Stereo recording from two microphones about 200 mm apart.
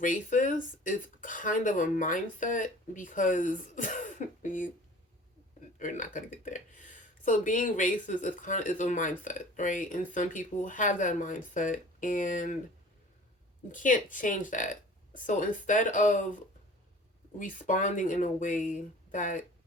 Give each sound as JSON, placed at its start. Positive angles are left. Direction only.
{"t": 0.0, "sound": "speech", "side_deg": 40}
{"t": 5.8, "sound": "speech", "side_deg": 40}
{"t": 13.7, "sound": "speech", "side_deg": 40}
{"t": 17.3, "sound": "speech", "side_deg": 40}